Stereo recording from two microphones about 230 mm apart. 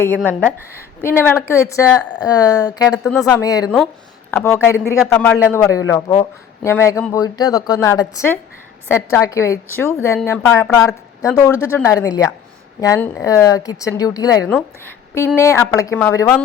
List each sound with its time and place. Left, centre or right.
0.3 s a woman's voice: centre